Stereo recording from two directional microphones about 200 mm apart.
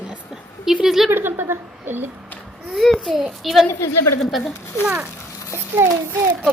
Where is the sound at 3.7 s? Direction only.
10° left (ahead or behind).